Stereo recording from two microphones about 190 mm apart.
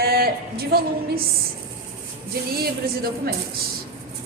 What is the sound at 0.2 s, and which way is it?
A woman's voice, 55° right (ahead or behind).